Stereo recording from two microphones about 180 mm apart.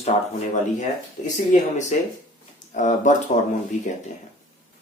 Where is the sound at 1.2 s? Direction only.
40° left (ahead or behind).